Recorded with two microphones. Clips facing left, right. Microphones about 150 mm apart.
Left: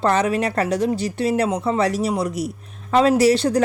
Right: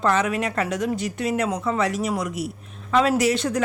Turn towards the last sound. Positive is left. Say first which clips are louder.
# left 5 dB
turn(degrees=35)  # may be behind; listen again after turning